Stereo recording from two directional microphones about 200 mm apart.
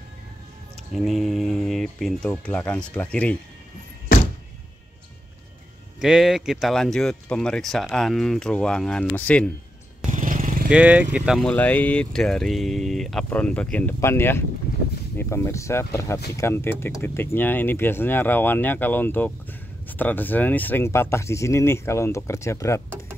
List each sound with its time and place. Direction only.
0.9 s speech: centre (ahead or behind)
5.9 s speech: 5° right (ahead or behind)
10.1 s vehicle: 40° right (ahead or behind)
10.7 s speech: 5° right (ahead or behind); by 22.8 s 15° left (ahead or behind)